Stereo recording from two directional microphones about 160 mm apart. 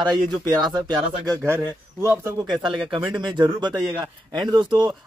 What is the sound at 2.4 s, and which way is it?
Speech, 30° right (ahead or behind).